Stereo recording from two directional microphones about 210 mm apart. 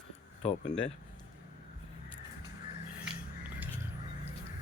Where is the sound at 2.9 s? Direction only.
5° right (ahead or behind).